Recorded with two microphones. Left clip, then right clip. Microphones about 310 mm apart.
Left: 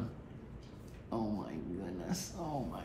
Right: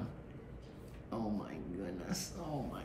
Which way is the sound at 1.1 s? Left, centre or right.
Centre.